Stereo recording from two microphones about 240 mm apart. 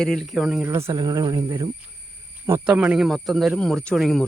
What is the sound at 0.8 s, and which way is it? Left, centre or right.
Speech, centre.